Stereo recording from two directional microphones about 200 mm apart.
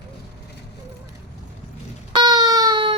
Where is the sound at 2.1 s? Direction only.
20° right (ahead or behind).